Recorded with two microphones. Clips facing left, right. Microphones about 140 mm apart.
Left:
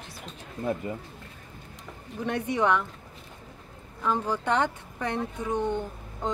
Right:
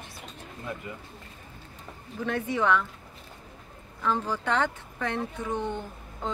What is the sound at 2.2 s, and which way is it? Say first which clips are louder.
Speech: left 1 dB; 15° left (ahead or behind).